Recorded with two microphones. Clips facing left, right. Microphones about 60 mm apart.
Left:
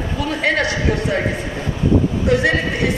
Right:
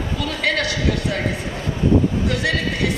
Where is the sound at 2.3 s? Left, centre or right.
Left.